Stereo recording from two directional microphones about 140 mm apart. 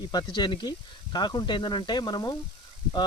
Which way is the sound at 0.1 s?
30° left (ahead or behind).